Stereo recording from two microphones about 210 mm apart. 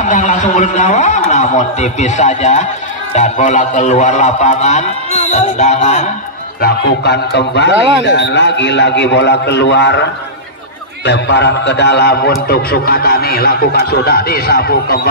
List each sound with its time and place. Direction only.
0.0 s a man's voice: 35° left (ahead or behind)
6.6 s a man's voice: 55° left (ahead or behind)
11.1 s speech: 55° left (ahead or behind)